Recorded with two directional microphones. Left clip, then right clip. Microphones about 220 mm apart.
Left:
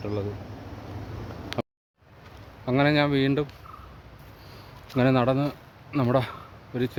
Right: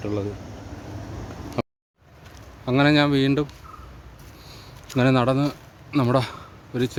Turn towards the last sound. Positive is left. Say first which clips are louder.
# right 3 dB
turn(degrees=-15)  # may be behind; listen again after turning